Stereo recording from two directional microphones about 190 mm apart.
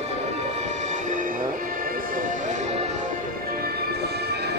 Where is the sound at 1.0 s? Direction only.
45° right (ahead or behind).